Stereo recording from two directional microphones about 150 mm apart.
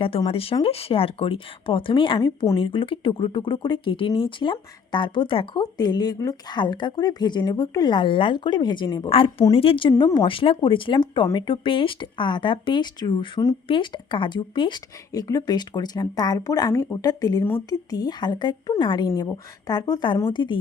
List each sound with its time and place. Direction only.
0.3 s speech: 40° left (ahead or behind)